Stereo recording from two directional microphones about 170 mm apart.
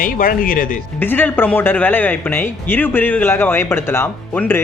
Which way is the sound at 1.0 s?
10° left (ahead or behind).